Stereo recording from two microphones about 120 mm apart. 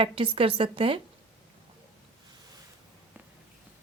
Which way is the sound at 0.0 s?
50° right (ahead or behind).